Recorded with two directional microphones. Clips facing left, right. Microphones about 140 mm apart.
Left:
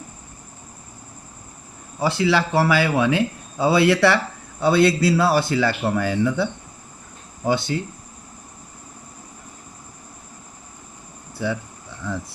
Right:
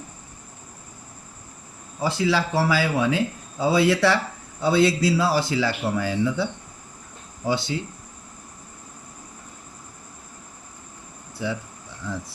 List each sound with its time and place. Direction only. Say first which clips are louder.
2.0 s speech: left 3 dB; 70° left (ahead or behind); by 7.8 s 55° left (ahead or behind)